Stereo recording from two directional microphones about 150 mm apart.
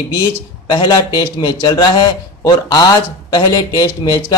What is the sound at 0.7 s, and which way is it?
A man's voice, 30° left (ahead or behind).